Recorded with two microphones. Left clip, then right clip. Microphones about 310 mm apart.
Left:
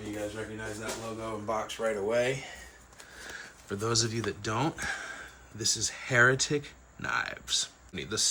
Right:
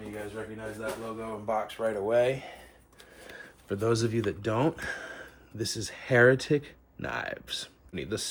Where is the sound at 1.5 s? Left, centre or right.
Centre.